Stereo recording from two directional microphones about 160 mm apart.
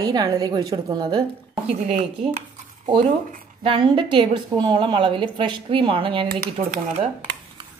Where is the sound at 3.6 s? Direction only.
35° right (ahead or behind).